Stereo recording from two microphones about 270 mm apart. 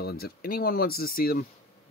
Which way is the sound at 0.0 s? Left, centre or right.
Left.